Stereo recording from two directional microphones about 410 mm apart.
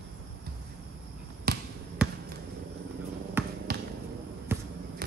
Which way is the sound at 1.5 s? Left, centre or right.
Right.